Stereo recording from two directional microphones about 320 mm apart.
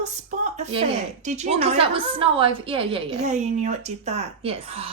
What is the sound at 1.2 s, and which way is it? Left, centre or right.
A woman's voice, right.